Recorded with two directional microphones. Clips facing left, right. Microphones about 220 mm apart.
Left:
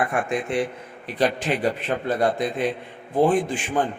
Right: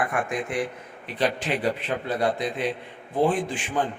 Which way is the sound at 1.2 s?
45° left (ahead or behind).